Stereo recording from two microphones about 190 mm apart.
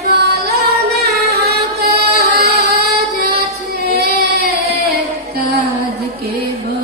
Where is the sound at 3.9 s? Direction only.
55° right (ahead or behind).